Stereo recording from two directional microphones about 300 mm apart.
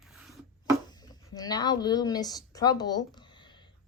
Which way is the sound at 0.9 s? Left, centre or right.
Centre.